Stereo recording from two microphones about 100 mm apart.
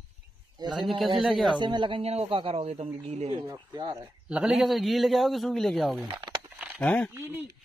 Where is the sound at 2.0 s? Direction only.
90° right.